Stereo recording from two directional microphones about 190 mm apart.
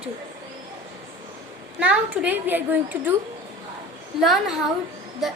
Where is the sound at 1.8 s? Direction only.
5° right (ahead or behind).